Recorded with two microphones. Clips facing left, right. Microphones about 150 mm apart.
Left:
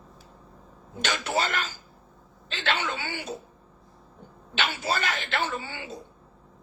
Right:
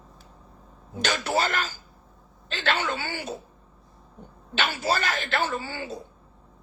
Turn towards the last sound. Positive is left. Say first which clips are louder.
# right 2 dB
turn(degrees=-40)  # may be behind; listen again after turning